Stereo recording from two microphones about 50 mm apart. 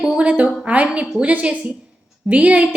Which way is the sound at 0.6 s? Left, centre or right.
Right.